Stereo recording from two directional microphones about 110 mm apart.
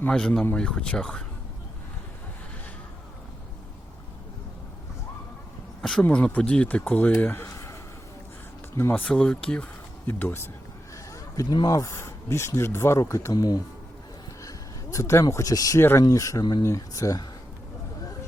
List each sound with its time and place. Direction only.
0.1 s speech: 5° left (ahead or behind)
5.8 s speech: 10° left (ahead or behind)
7.2 s a sound: 20° left (ahead or behind)
8.7 s speech: 20° left (ahead or behind)
10.1 s speech: 20° left (ahead or behind)
11.1 s speech: 35° left (ahead or behind)
14.9 s speech: 25° left (ahead or behind)
15.8 s speech: 20° left (ahead or behind)
16.0 s speech: 30° left (ahead or behind)